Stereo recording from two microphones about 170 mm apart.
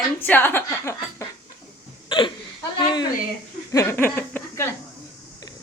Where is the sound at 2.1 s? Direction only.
30° left (ahead or behind); by 4.6 s 10° left (ahead or behind).